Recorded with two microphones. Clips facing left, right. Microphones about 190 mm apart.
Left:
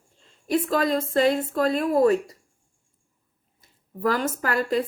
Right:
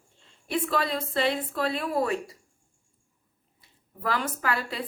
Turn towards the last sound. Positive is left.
turn(degrees=45)  # may be behind; listen again after turning